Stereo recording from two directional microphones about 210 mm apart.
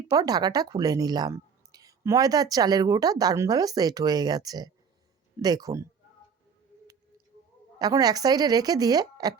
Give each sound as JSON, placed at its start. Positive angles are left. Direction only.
{"t": 0.1, "sound": "speech", "side_deg": -20}
{"t": 7.8, "sound": "speech", "side_deg": -20}